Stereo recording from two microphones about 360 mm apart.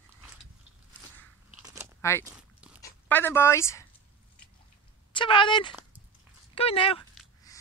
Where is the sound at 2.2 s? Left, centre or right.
Centre.